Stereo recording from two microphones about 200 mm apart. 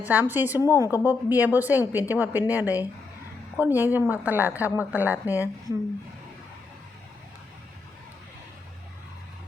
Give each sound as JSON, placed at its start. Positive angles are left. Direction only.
{"t": 0.0, "sound": "a woman's voice", "side_deg": -10}